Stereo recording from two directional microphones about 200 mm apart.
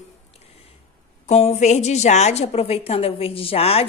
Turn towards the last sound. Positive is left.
turn(degrees=30)  # may be behind; listen again after turning